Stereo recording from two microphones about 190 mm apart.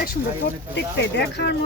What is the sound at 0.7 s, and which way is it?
Speech, 65° left (ahead or behind).